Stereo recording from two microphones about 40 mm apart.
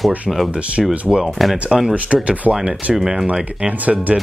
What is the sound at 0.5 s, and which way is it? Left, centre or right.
Speech, right.